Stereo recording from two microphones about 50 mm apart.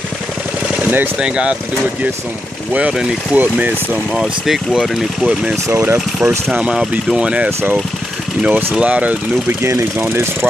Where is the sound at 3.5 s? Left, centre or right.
Right.